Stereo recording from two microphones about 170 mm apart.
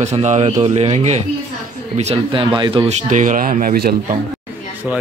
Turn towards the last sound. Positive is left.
turn(degrees=-60)  # may be behind; listen again after turning